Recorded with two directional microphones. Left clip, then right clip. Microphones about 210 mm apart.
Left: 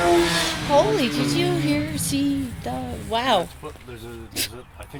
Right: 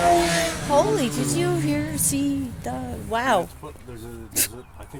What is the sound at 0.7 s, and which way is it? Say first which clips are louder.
Speech: left 2 dB; 5° left (ahead or behind).